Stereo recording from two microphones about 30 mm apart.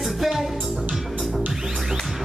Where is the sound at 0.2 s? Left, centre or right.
Centre.